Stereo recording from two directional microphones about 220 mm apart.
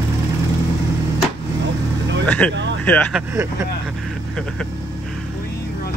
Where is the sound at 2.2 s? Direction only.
5° left (ahead or behind).